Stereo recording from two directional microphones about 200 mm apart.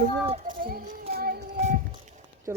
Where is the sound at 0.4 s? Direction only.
45° right (ahead or behind).